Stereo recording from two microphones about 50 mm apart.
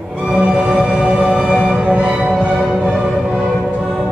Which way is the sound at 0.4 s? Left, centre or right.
Right.